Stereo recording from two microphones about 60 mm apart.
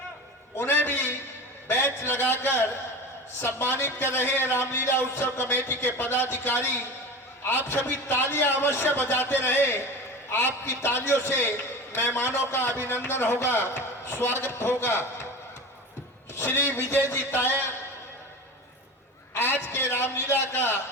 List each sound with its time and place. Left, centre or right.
0.5 s a sound: left
1.6 s a man's voice: left
16.3 s a man's voice: left
19.3 s a man's voice: left